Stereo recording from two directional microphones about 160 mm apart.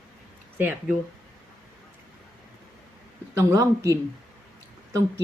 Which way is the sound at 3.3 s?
20° right (ahead or behind).